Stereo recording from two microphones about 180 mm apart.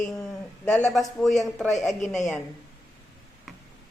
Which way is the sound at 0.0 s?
5° left (ahead or behind).